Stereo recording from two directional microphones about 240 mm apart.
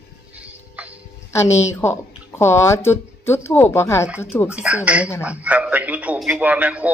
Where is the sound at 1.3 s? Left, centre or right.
Centre.